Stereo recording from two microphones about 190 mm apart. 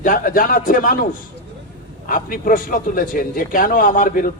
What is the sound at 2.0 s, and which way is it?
A man's voice, 45° left (ahead or behind).